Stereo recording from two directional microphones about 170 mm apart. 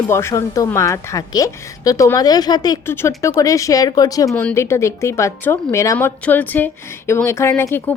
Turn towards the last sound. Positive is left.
turn(degrees=10)  # may be behind; listen again after turning